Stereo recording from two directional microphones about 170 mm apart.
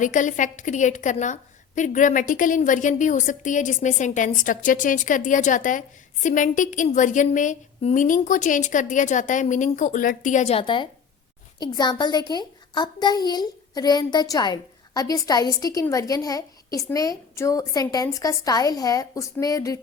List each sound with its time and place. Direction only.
0.0 s a woman's voice: 50° left (ahead or behind); by 19.8 s 20° left (ahead or behind)